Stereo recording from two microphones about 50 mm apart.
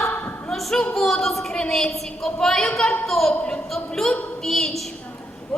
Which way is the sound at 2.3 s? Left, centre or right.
Centre.